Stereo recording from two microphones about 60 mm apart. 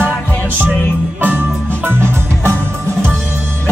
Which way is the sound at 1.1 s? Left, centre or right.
Right.